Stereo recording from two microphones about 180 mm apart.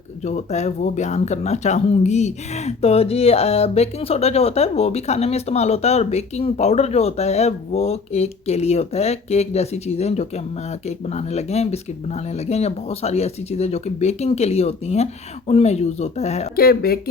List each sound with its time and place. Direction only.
0.2 s speech: 40° left (ahead or behind)
16.6 s speech: 55° left (ahead or behind)